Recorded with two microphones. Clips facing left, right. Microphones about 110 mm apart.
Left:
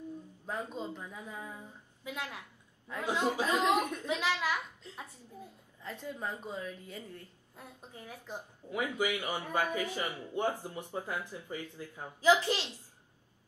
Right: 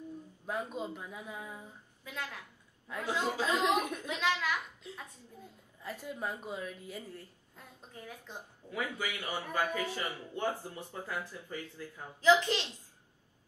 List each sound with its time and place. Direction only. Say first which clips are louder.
0.5 s speech: right 1 dB; 10° right (ahead or behind)
2.0 s speech: left 2 dB; 15° left (ahead or behind)
3.8 s speech: left 1 dB; 10° right (ahead or behind)
4.4 s speech: left 1 dB; 15° left (ahead or behind)
5.8 s speech: right 1 dB; 10° right (ahead or behind)
7.5 s speech: left 2 dB; 15° left (ahead or behind)